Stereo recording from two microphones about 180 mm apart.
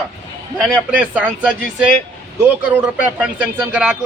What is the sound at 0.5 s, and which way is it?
Speech, 5° right (ahead or behind).